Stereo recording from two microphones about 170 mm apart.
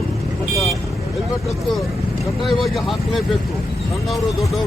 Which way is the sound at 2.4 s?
Centre (ahead or behind).